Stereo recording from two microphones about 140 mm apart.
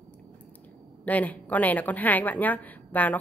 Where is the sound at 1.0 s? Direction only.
10° left (ahead or behind).